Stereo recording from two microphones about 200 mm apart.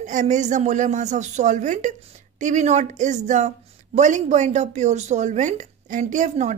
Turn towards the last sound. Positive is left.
turn(degrees=-35)  # may be behind; listen again after turning